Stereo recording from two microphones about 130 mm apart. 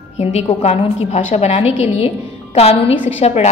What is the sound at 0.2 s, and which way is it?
A woman's voice, 60° left (ahead or behind).